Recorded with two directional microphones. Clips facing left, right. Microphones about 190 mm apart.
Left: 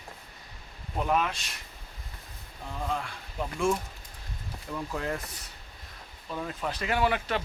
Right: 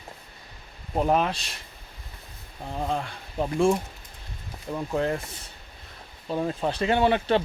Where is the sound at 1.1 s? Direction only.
35° right (ahead or behind).